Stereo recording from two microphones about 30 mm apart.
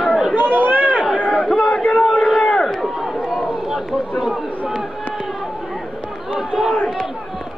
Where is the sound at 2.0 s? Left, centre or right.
Centre.